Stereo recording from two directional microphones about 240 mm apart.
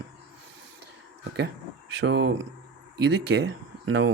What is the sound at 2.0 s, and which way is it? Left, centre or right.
Speech, right.